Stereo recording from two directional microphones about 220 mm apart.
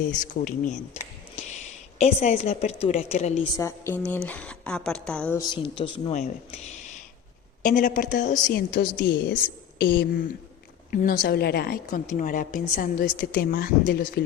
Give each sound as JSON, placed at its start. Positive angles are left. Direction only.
{"t": 0.1, "sound": "a woman's voice", "side_deg": 35}
{"t": 2.0, "sound": "a woman's voice", "side_deg": 30}
{"t": 3.6, "sound": "speech", "side_deg": 10}
{"t": 5.4, "sound": "speech", "side_deg": 25}
{"t": 7.6, "sound": "a woman's voice", "side_deg": 35}